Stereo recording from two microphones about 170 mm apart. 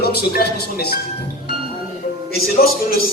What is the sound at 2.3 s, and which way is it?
Speech, 65° left (ahead or behind).